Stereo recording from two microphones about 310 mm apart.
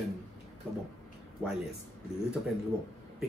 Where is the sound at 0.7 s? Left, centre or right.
Centre.